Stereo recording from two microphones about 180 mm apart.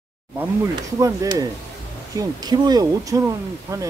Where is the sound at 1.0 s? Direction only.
20° right (ahead or behind).